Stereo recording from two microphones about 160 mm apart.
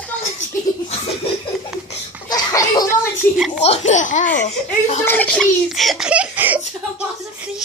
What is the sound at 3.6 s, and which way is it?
Speech, 45° left (ahead or behind).